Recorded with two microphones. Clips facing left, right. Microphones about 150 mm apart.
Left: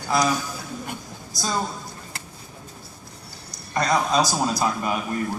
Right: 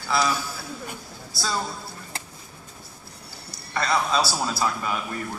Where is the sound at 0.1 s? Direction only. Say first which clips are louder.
Left 2 dB; 15° left (ahead or behind).